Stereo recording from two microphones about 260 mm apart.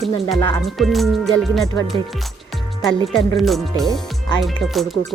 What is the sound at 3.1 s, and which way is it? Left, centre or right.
Speech, centre.